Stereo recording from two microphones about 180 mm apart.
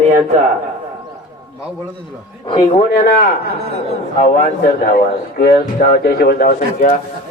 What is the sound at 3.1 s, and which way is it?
Speech, 50° left (ahead or behind).